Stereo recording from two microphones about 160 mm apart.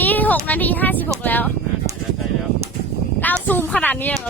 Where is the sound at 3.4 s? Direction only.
10° left (ahead or behind).